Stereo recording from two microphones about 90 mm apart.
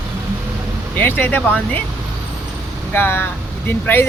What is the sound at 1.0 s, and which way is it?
Speech, 25° left (ahead or behind).